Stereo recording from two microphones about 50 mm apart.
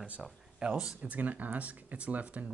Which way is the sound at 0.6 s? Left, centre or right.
Centre.